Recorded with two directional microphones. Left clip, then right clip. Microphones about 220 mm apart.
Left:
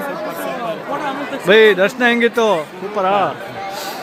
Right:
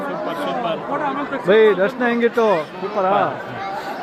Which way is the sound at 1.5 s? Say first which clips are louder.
Left 3 dB; 15° left (ahead or behind).